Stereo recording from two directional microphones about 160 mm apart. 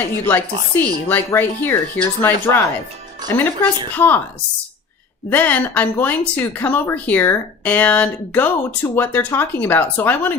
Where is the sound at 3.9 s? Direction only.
10° left (ahead or behind).